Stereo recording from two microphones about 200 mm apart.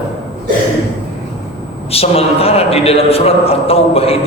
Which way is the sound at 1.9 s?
30° left (ahead or behind).